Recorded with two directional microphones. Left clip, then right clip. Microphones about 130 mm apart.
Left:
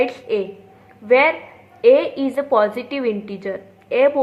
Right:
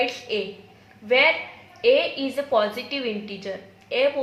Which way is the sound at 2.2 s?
65° left (ahead or behind).